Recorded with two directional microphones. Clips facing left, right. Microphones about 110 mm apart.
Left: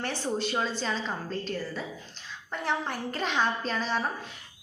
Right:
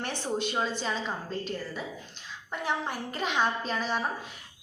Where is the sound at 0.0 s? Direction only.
15° right (ahead or behind).